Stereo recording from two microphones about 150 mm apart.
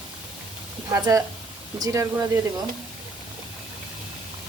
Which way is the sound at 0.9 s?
25° right (ahead or behind).